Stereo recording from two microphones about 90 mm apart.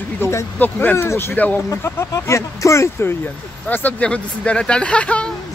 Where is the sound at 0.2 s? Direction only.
30° left (ahead or behind).